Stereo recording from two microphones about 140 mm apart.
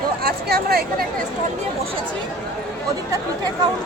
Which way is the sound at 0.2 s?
90° right.